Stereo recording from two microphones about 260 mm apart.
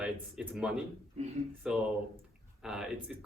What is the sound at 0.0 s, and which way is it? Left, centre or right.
Speech, centre.